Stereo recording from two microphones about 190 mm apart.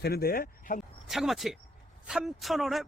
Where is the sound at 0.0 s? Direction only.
55° left (ahead or behind).